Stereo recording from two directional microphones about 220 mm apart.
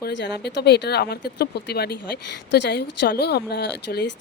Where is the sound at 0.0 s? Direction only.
50° left (ahead or behind).